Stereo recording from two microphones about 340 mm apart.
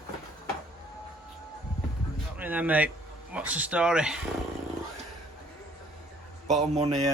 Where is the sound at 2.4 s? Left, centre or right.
Centre.